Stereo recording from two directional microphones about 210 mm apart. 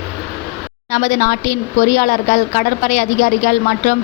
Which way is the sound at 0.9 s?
35° left (ahead or behind).